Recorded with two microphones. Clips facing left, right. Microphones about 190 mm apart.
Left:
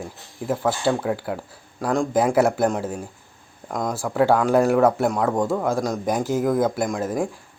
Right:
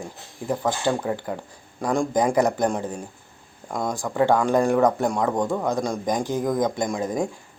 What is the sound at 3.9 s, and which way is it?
Speech, 5° left (ahead or behind).